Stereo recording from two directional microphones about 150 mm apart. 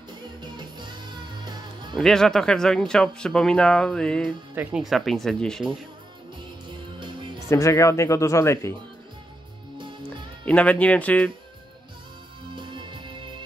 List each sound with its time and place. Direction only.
0.4 s music: 30° right (ahead or behind)
2.0 s speech: centre (ahead or behind)
4.6 s speech: 5° right (ahead or behind)
7.0 s music: 35° right (ahead or behind)
7.4 s speech: 20° left (ahead or behind)
10.0 s speech: 10° left (ahead or behind)
12.5 s music: 30° right (ahead or behind)